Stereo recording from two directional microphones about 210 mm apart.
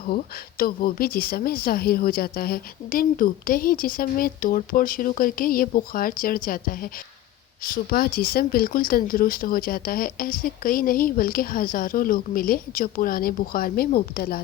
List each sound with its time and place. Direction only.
0.0 s a woman's voice: 45° left (ahead or behind)